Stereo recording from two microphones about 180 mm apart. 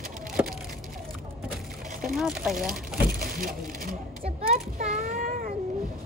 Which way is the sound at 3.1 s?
50° right (ahead or behind).